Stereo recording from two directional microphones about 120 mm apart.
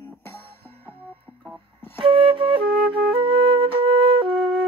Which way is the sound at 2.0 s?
45° right (ahead or behind).